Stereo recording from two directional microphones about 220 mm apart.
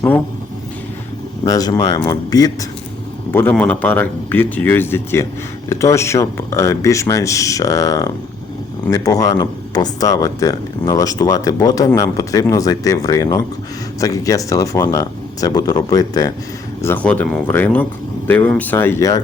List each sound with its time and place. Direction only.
1.5 s speech: 15° left (ahead or behind)